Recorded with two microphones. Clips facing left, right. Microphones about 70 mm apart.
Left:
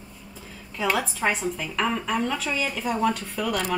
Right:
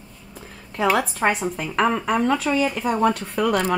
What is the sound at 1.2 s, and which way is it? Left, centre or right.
Speech, right.